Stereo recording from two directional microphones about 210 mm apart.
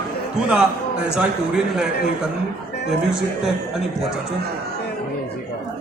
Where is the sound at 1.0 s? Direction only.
5° right (ahead or behind).